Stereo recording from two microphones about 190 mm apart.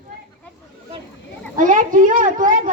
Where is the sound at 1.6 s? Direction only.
45° right (ahead or behind).